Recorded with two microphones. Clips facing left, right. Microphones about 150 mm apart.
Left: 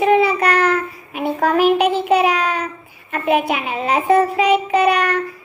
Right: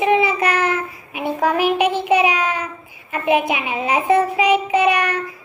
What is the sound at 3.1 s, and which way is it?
A woman's voice, 10° right (ahead or behind).